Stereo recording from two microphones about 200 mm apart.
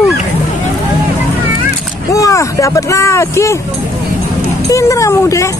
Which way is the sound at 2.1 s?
15° left (ahead or behind).